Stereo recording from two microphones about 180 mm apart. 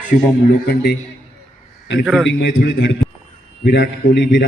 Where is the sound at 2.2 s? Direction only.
75° left (ahead or behind); by 2.8 s 60° left (ahead or behind).